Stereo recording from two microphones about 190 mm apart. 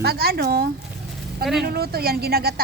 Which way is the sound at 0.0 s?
55° right (ahead or behind).